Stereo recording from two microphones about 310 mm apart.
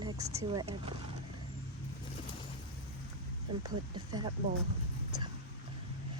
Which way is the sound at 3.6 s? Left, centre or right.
Centre.